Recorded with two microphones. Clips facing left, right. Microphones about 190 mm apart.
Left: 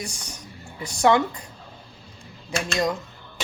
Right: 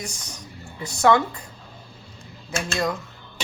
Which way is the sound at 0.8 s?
15° left (ahead or behind).